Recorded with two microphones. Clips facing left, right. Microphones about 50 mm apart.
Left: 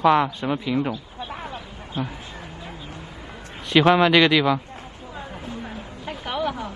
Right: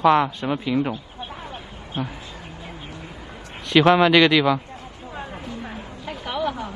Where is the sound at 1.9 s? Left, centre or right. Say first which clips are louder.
Even; right.